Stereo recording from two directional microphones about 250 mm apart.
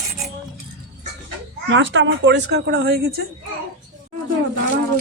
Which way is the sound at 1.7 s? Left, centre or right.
Right.